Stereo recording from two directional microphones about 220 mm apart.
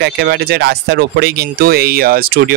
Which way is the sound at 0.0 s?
45° right (ahead or behind).